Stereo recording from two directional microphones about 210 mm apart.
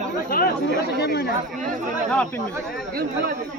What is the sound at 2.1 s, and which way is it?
Speech, 5° left (ahead or behind).